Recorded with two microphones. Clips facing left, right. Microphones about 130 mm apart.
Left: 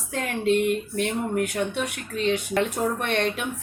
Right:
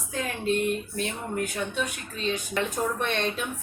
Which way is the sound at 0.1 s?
70° left (ahead or behind).